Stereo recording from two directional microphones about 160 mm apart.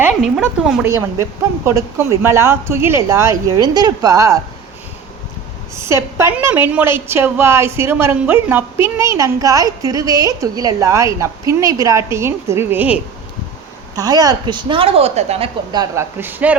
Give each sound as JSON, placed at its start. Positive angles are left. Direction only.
{"t": 0.2, "sound": "a woman's voice", "side_deg": 0}
{"t": 1.6, "sound": "a woman's voice", "side_deg": -15}
{"t": 5.7, "sound": "a woman's voice", "side_deg": -15}
{"t": 13.9, "sound": "a woman's voice", "side_deg": -25}
{"t": 15.7, "sound": "speech", "side_deg": -25}
{"t": 16.1, "sound": "a woman's voice", "side_deg": -10}